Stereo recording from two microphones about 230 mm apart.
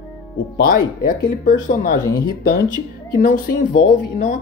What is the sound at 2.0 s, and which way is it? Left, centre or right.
Speech, centre.